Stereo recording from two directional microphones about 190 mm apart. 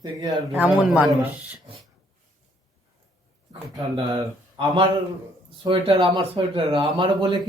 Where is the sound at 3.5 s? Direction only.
25° right (ahead or behind).